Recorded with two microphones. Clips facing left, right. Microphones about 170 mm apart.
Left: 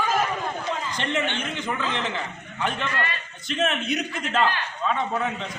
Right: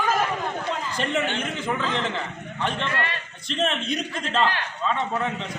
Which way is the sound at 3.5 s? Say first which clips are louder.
Even; 5° left (ahead or behind).